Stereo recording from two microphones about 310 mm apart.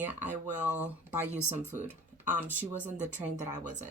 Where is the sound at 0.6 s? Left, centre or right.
Centre.